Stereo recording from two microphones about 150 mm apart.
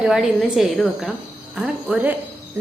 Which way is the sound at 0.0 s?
5° right (ahead or behind).